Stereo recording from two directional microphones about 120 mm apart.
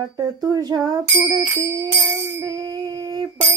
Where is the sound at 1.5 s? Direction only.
25° right (ahead or behind).